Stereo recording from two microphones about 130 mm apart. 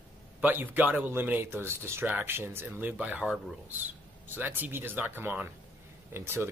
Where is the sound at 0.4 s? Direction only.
15° right (ahead or behind).